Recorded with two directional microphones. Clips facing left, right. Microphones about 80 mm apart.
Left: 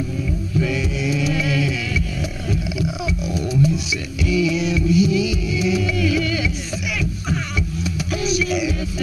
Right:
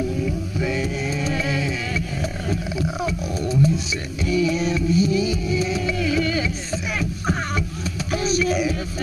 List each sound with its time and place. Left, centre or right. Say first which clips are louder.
0.6 s music: left 3 dB; right
3.0 s roaring cats: left 1 dB; right
4.3 s vehicle: left 1 dB; right
6.9 s music: even; right